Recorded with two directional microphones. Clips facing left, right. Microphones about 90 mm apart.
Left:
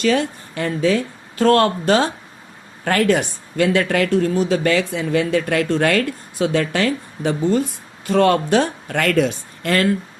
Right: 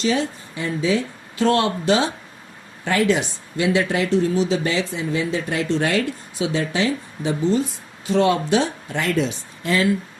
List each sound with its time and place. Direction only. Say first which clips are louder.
0.0 s speech: left 3 dB; 60° left (ahead or behind)